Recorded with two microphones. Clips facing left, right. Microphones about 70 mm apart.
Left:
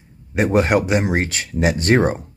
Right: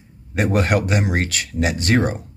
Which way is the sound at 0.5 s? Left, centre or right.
Left.